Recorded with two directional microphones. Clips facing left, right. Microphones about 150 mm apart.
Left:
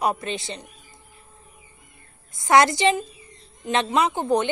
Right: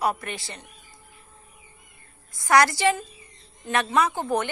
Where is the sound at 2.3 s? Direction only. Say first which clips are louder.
Left 2 dB; 20° left (ahead or behind).